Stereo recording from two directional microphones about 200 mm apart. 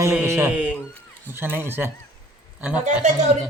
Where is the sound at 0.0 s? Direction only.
10° right (ahead or behind).